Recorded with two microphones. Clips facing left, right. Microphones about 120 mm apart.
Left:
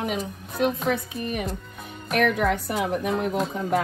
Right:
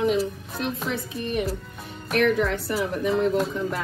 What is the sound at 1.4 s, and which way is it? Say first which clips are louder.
Music: right 2 dB; centre (ahead or behind).